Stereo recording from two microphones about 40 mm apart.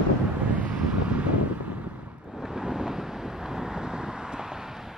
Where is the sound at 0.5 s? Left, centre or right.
Right.